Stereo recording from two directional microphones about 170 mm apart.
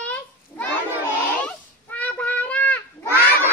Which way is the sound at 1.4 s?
10° left (ahead or behind).